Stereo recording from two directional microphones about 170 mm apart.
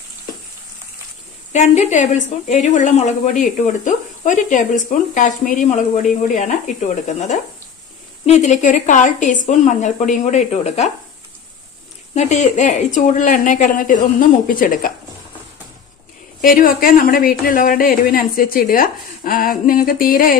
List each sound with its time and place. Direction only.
1.5 s a woman's voice: 45° left (ahead or behind)
12.1 s a woman's voice: 40° left (ahead or behind)
16.3 s speech: 55° left (ahead or behind)